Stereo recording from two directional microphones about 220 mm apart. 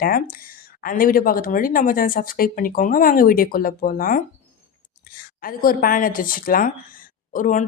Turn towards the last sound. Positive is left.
turn(degrees=35)  # may be behind; listen again after turning